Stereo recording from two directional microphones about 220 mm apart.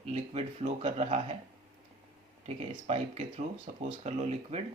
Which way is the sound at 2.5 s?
30° right (ahead or behind).